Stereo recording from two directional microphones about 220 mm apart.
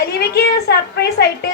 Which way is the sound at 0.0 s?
45° left (ahead or behind).